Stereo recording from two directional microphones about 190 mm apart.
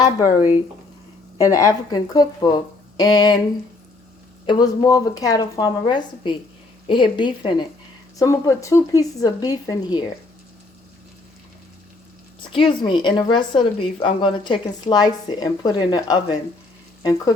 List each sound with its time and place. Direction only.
1.4 s speech: 15° left (ahead or behind)
4.4 s speech: 20° left (ahead or behind)
12.5 s speech: 25° left (ahead or behind)